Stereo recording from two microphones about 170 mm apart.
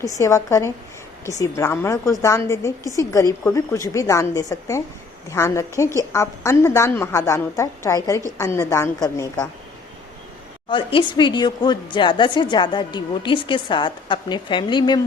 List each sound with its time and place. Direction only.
0.0 s a woman's voice: 20° left (ahead or behind)
10.7 s a woman's voice: 30° left (ahead or behind)